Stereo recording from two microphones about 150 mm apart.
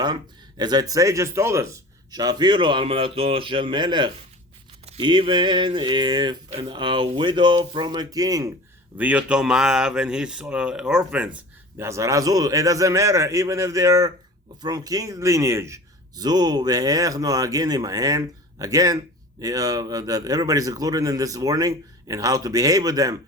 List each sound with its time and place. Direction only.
0.0 s speech: 30° right (ahead or behind)
9.0 s speech: 10° right (ahead or behind)
11.8 s speech: 20° right (ahead or behind)